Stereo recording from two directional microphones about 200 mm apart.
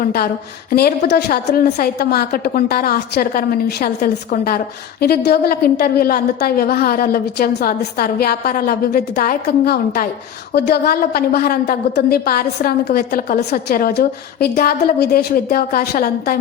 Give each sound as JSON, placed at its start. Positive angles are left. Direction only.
{"t": 0.0, "sound": "a woman's voice", "side_deg": 45}